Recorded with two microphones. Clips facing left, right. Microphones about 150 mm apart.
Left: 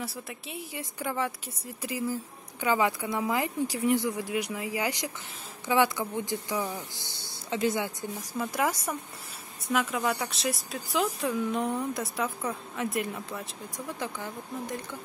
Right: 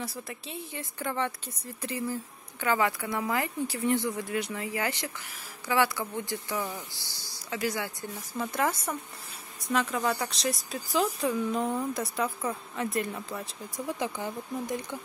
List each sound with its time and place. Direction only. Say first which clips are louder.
0.3 s speech: even; 10° left (ahead or behind); by 7.9 s 25° left (ahead or behind)
8.2 s speech: even; 10° left (ahead or behind)
13.7 s speech: right 3 dB; 15° right (ahead or behind)